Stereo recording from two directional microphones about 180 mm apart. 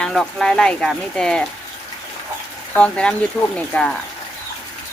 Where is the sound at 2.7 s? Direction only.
5° left (ahead or behind).